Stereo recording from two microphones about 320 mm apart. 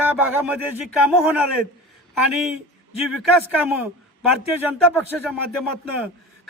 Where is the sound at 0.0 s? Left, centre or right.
Centre.